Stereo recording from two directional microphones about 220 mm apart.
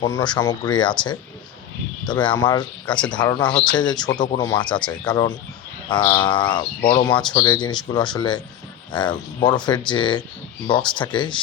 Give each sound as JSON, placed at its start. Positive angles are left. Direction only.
{"t": 0.0, "sound": "speech", "side_deg": 20}